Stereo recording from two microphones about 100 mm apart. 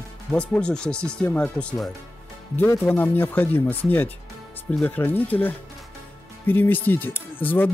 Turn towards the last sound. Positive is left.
turn(degrees=20)  # may be behind; listen again after turning